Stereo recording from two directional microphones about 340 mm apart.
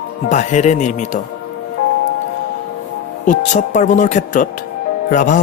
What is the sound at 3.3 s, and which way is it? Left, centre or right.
Speech, left.